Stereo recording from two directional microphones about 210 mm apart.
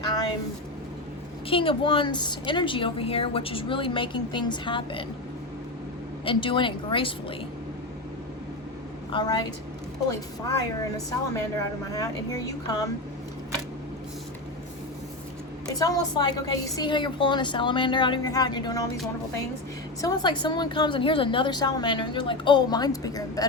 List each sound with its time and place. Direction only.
1.5 s a woman's voice: 25° left (ahead or behind)
6.2 s a woman's voice: 25° left (ahead or behind)
9.1 s a woman's voice: 20° left (ahead or behind)
10.6 s a woman's voice: 15° left (ahead or behind)
15.6 s a woman's voice: 15° left (ahead or behind)
20.0 s a woman's voice: 20° left (ahead or behind)